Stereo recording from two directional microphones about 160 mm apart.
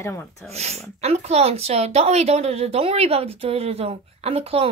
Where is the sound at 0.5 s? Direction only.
40° right (ahead or behind).